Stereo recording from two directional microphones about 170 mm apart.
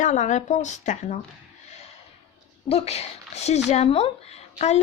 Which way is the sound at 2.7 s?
40° left (ahead or behind).